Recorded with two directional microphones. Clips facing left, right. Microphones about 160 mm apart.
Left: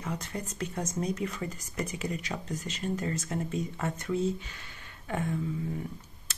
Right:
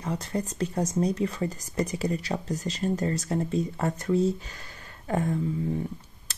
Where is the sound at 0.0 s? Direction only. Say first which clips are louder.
Right 6 dB; 35° right (ahead or behind).